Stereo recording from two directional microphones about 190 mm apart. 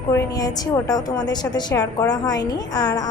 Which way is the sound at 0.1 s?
20° left (ahead or behind).